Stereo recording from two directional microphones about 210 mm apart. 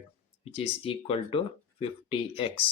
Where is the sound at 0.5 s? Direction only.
25° left (ahead or behind).